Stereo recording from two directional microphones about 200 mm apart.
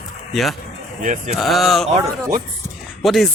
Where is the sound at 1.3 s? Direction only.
Centre (ahead or behind).